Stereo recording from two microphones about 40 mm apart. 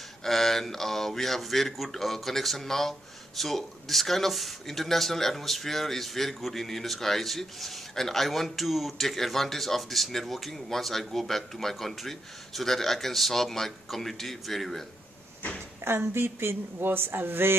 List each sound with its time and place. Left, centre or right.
0.2 s speech: centre
15.8 s speech: right